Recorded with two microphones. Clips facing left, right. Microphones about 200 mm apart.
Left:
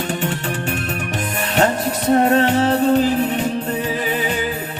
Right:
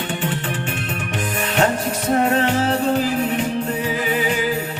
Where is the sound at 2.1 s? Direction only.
35° left (ahead or behind).